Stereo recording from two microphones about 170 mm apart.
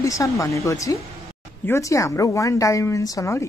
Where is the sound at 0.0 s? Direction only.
20° left (ahead or behind).